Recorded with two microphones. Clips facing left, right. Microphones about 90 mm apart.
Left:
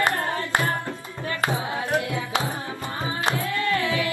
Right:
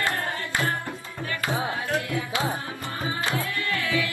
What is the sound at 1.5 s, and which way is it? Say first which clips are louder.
Music: right 1 dB; 20° left (ahead or behind).